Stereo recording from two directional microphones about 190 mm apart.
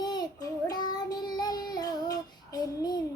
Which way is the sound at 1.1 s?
20° left (ahead or behind).